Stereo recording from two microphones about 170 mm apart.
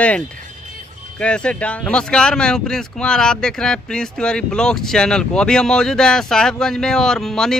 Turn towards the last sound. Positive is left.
turn(degrees=5)  # may be behind; listen again after turning